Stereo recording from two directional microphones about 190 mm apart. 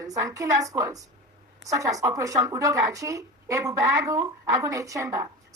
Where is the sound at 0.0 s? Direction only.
15° right (ahead or behind).